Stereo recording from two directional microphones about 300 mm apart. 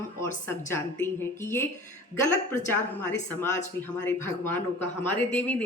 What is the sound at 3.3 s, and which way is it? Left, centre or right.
A man's voice, centre.